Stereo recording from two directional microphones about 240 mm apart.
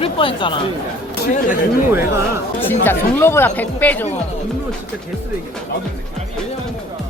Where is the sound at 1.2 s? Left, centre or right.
Left.